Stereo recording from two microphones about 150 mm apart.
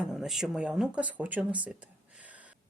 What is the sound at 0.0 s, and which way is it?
Speech, 5° right (ahead or behind).